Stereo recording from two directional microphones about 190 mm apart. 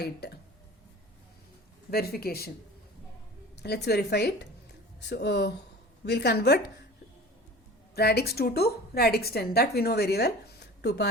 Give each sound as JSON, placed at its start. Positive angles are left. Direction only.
{"t": 0.0, "sound": "a woman's voice", "side_deg": 60}
{"t": 1.9, "sound": "speech", "side_deg": 55}
{"t": 3.6, "sound": "a woman's voice", "side_deg": 60}
{"t": 7.9, "sound": "a woman's voice", "side_deg": 55}